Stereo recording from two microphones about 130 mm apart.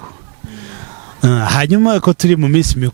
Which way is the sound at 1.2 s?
15° right (ahead or behind).